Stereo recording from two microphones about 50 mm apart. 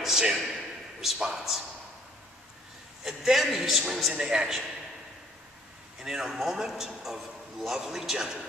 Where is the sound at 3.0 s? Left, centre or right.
Centre.